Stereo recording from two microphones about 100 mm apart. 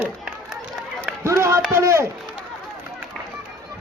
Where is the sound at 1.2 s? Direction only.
30° right (ahead or behind).